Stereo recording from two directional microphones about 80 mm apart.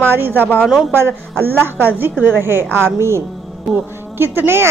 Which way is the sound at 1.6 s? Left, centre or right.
Right.